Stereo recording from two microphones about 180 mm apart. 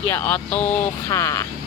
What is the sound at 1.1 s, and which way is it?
Speech, 20° left (ahead or behind).